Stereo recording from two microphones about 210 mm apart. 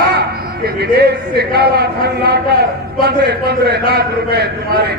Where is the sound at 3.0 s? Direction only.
50° right (ahead or behind).